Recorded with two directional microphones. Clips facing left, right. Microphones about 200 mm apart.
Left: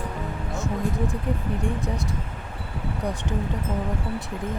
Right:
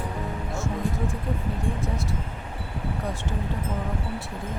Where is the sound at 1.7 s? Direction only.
15° left (ahead or behind).